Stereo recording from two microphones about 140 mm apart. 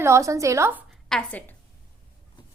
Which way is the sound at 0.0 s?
20° right (ahead or behind).